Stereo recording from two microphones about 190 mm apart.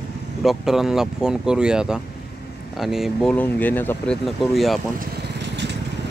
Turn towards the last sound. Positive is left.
turn(degrees=-65)  # may be behind; listen again after turning